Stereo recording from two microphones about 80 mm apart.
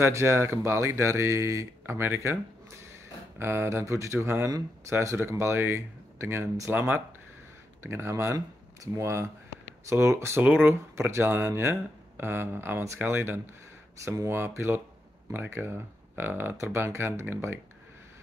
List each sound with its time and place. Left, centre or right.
0.0 s speech: right
3.3 s speech: right
6.7 s speech: right